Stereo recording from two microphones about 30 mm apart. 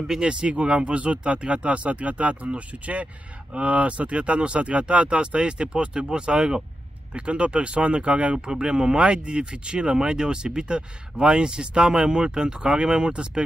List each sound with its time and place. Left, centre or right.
0.2 s speech: right
7.2 s speech: right
8.4 s speech: right